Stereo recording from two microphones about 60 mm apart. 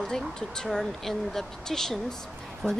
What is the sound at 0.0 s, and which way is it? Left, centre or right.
Speech, centre.